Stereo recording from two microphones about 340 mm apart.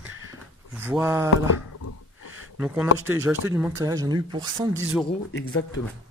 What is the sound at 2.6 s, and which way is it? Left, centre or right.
Speech, centre.